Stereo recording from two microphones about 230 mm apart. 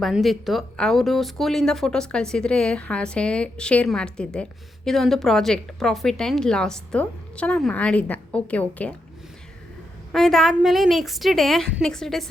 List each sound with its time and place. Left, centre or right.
0.0 s speech: centre
10.1 s speech: centre